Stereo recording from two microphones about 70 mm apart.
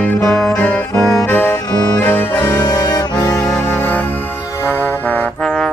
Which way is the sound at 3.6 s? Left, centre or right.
Left.